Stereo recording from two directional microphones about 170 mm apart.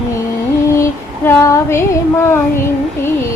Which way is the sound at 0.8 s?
15° left (ahead or behind).